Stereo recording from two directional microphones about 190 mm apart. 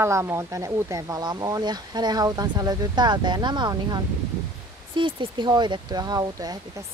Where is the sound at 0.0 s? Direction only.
15° right (ahead or behind).